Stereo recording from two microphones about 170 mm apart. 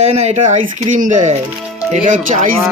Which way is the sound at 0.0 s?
40° right (ahead or behind).